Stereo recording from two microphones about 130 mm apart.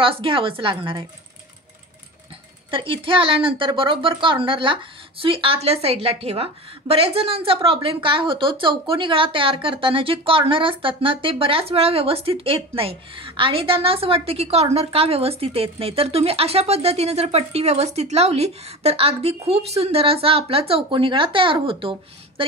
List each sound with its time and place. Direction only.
0.0 s a woman's voice: 45° right (ahead or behind)
2.7 s a woman's voice: 40° right (ahead or behind)